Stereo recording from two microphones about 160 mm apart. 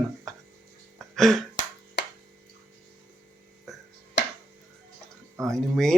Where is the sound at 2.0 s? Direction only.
90° left.